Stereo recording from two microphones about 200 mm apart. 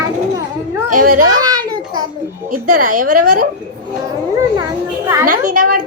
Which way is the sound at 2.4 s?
40° right (ahead or behind).